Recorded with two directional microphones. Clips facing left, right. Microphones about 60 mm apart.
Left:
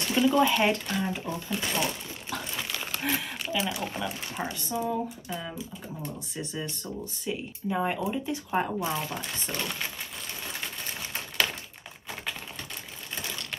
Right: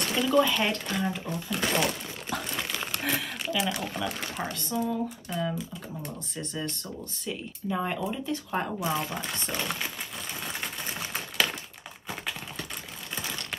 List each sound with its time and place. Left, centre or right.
0.1 s speech: centre
1.5 s speech: right
1.8 s crumpling: centre
4.4 s speech: centre
8.7 s speech: centre
11.1 s a sound: centre